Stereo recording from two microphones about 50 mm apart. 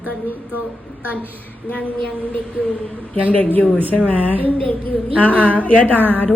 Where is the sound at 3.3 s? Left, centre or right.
Left.